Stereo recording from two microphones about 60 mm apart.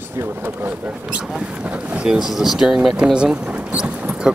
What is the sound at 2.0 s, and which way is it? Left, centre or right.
Speech, centre.